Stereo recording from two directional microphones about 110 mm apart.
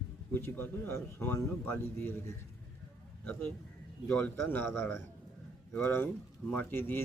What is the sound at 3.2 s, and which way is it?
A man's voice, 20° left (ahead or behind).